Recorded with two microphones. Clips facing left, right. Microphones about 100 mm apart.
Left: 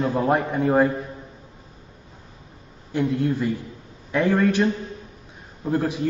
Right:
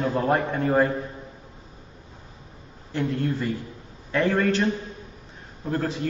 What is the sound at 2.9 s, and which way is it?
A man's voice, 15° left (ahead or behind).